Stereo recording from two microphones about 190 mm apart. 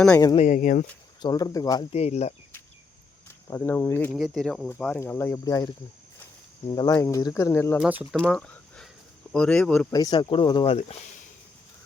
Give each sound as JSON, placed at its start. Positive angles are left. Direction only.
{"t": 0.3, "sound": "speech", "side_deg": 40}
{"t": 1.2, "sound": "speech", "side_deg": 20}
{"t": 1.9, "sound": "speech", "side_deg": 35}
{"t": 3.5, "sound": "speech", "side_deg": 10}
{"t": 4.1, "sound": "speech", "side_deg": 0}
{"t": 7.8, "sound": "speech", "side_deg": -10}
{"t": 8.2, "sound": "a sound", "side_deg": 0}
{"t": 9.3, "sound": "speech", "side_deg": 5}
{"t": 9.9, "sound": "speech", "side_deg": 20}